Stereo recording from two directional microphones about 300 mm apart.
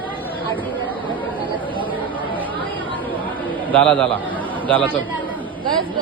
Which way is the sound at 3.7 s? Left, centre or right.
Centre.